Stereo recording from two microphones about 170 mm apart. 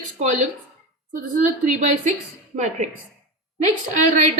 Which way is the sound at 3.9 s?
45° right (ahead or behind).